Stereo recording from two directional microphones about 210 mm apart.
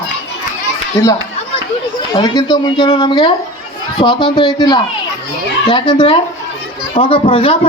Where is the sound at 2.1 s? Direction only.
20° left (ahead or behind).